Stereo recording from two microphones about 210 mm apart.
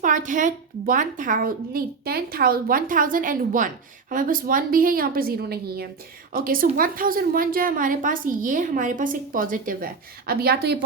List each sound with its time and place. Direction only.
0.0 s a woman's voice: 40° right (ahead or behind)